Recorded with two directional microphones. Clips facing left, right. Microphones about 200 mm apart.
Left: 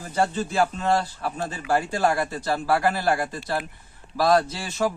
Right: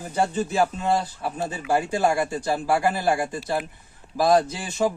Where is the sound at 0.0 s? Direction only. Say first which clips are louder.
Even; 15° right (ahead or behind).